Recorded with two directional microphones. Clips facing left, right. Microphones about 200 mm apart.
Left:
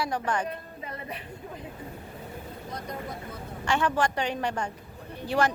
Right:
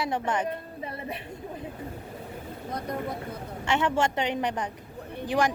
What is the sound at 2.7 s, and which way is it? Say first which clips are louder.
Vehicle: right 5 dB; 55° right (ahead or behind).